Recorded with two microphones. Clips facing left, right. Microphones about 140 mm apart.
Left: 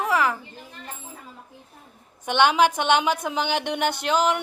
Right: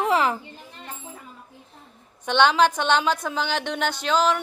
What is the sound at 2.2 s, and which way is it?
A woman's voice, 10° left (ahead or behind).